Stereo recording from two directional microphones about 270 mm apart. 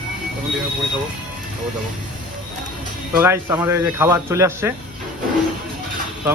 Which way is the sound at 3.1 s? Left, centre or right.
Centre.